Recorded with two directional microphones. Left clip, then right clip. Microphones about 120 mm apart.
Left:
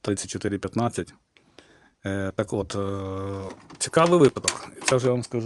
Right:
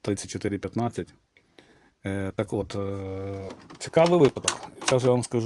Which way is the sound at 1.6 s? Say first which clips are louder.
Left 2 dB; 20° left (ahead or behind).